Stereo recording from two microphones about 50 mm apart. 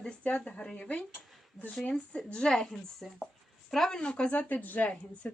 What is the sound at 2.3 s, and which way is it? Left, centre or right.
A woman's voice, centre.